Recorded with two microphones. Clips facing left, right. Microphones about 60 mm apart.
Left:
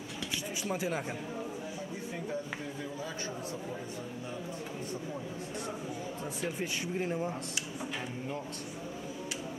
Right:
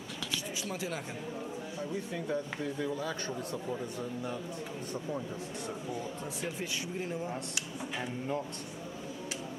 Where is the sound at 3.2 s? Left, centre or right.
Centre.